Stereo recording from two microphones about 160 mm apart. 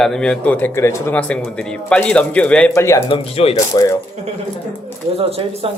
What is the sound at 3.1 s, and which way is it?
Speech, 35° left (ahead or behind).